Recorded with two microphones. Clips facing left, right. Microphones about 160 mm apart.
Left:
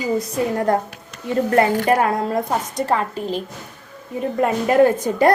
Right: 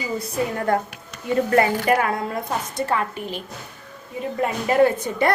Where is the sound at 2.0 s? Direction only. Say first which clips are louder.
Left 5 dB; 35° left (ahead or behind).